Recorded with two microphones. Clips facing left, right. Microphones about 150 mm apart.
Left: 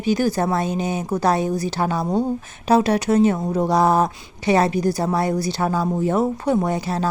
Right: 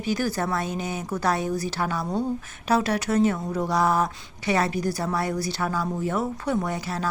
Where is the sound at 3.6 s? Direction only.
20° left (ahead or behind).